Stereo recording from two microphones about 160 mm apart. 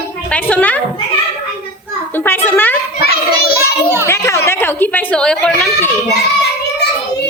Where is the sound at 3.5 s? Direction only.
15° right (ahead or behind).